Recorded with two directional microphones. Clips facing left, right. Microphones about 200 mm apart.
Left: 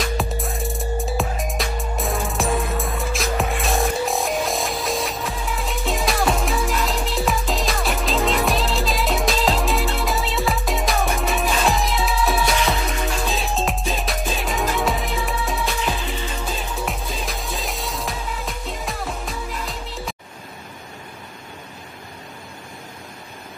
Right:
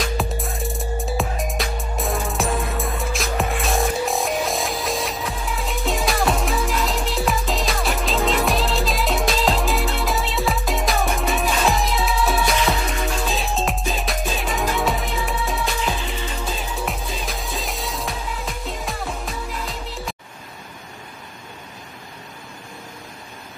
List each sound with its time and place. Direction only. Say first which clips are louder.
0.0 s music: even; centre (ahead or behind)